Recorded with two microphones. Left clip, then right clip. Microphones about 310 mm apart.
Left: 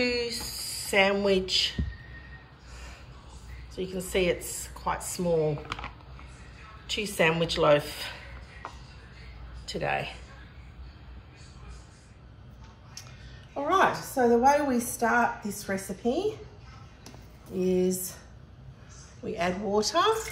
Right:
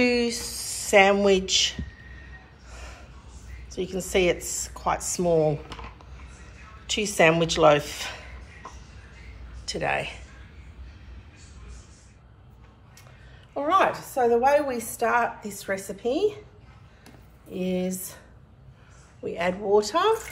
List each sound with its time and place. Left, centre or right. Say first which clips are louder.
0.0 s speech: right 5 dB; centre
3.7 s a woman's voice: right 4 dB; centre
6.9 s a woman's voice: right 5 dB; centre
9.7 s speech: right 3 dB; centre
13.6 s a woman's voice: right 2 dB; right
17.7 s a woman's voice: left 3 dB; right
19.2 s speech: right 3 dB; right